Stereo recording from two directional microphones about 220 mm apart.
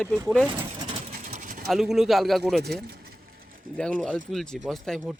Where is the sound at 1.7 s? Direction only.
Centre (ahead or behind).